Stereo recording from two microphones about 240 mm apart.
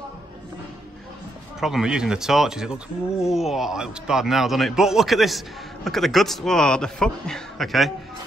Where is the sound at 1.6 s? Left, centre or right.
Centre.